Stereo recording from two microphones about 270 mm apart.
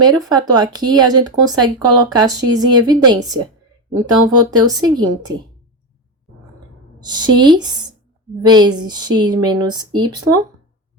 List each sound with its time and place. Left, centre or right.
0.0 s speech: centre
7.0 s speech: centre